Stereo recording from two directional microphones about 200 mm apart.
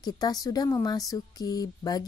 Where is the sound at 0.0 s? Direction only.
20° left (ahead or behind).